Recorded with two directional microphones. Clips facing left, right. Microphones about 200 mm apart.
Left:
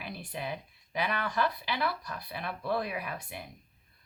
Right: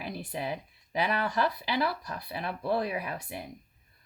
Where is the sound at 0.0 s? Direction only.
35° right (ahead or behind).